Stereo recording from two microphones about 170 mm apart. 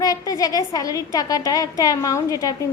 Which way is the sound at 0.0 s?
20° left (ahead or behind).